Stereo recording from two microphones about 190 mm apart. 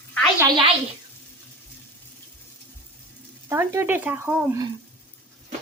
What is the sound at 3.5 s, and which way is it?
Speech, 10° right (ahead or behind).